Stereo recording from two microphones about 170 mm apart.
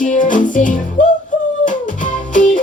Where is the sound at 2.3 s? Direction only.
50° left (ahead or behind).